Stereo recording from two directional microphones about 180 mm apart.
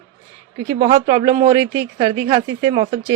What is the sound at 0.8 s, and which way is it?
Speech, 30° right (ahead or behind).